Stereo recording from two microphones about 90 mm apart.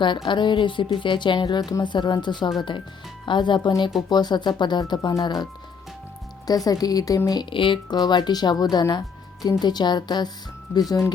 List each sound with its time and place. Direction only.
0.0 s a woman's voice: 60° left (ahead or behind)
6.7 s a woman's voice: 45° left (ahead or behind)
7.5 s a woman's voice: 70° left (ahead or behind); by 11.0 s 45° left (ahead or behind)